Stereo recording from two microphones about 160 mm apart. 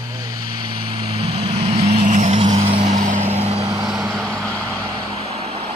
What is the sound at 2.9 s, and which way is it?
Vehicle, 50° right (ahead or behind).